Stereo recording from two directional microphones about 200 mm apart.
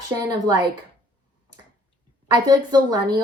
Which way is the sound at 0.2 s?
20° right (ahead or behind).